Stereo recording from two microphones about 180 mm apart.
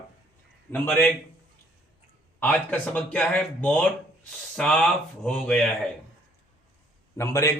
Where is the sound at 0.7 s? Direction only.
10° left (ahead or behind).